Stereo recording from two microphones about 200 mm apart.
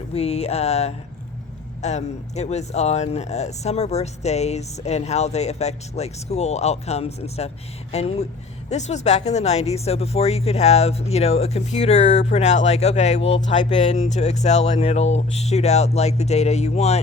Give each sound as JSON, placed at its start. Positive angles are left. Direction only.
{"t": 0.1, "sound": "speech", "side_deg": 30}